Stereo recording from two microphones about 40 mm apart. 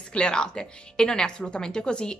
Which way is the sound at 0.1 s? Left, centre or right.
Left.